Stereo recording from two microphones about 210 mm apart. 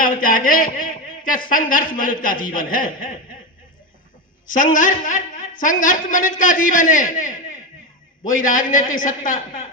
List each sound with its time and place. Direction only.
0.0 s a man's voice: 40° left (ahead or behind)
4.5 s a man's voice: 40° left (ahead or behind)